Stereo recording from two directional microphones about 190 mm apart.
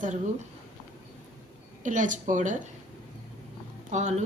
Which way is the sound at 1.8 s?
40° right (ahead or behind).